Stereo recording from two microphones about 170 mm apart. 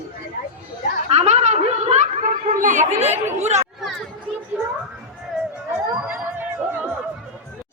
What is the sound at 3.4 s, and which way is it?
Chatter, 40° right (ahead or behind).